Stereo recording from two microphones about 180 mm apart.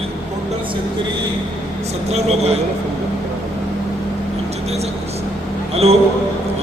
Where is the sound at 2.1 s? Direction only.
35° right (ahead or behind).